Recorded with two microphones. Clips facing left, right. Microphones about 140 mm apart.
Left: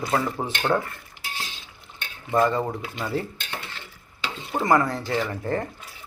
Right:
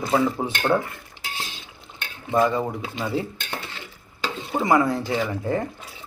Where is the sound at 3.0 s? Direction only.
15° right (ahead or behind).